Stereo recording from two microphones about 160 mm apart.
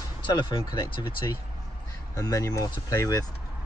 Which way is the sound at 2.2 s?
20° left (ahead or behind).